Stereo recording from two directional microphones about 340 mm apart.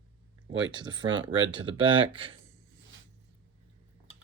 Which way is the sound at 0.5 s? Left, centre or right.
Centre.